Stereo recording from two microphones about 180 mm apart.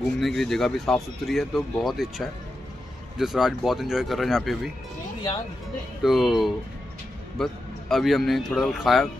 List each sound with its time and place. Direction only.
0.0 s speech: centre (ahead or behind)
6.0 s speech: centre (ahead or behind)